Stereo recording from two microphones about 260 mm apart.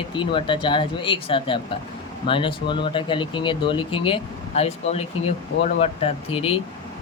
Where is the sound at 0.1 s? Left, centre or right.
Centre.